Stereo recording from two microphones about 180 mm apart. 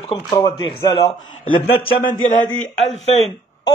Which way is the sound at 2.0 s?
45° left (ahead or behind).